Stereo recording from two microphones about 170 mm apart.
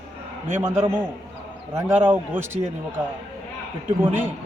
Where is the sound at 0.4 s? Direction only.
15° right (ahead or behind).